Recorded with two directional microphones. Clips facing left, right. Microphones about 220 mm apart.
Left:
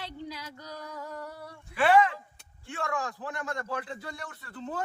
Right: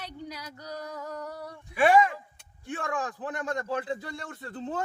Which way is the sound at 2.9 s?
20° right (ahead or behind).